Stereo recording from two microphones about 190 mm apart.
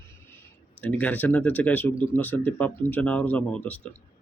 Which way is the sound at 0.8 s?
5° left (ahead or behind).